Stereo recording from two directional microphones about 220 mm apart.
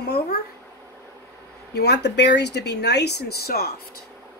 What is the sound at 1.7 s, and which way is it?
Speech, 50° left (ahead or behind).